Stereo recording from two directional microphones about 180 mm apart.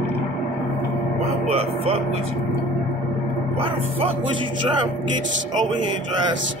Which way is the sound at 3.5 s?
30° right (ahead or behind).